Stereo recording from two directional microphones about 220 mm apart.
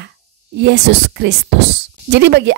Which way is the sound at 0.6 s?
50° right (ahead or behind).